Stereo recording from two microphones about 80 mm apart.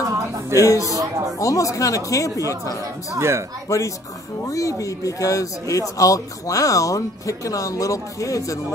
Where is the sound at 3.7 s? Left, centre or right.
Left.